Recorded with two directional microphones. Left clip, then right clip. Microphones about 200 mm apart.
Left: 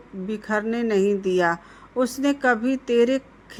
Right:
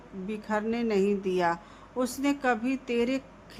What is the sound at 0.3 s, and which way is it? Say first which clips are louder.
A woman's voice: left 5 dB; 15° left (ahead or behind).